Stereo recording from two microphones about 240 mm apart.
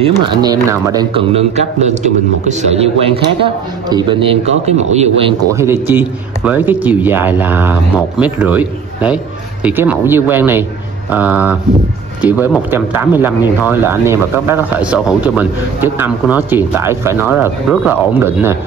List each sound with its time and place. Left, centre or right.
0.0 s a man's voice: centre
3.9 s a man's voice: centre
5.5 s speech: centre